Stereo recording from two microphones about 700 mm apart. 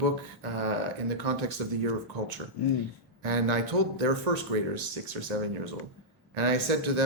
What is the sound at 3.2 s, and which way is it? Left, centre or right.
Speech, right.